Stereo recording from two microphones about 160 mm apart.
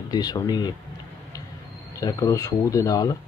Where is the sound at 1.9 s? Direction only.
20° left (ahead or behind).